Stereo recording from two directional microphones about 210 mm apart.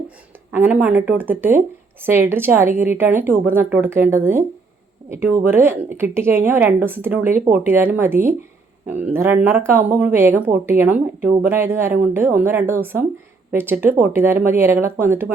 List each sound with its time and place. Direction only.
0.5 s speech: 10° right (ahead or behind)